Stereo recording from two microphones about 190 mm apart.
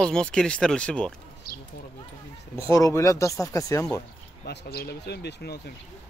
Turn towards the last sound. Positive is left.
turn(degrees=60)  # may be behind; listen again after turning